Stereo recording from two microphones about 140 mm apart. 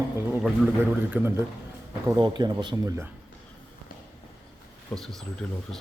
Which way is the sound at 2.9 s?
20° right (ahead or behind).